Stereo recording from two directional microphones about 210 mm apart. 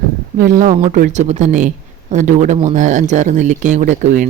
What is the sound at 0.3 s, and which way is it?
Speech, 40° right (ahead or behind).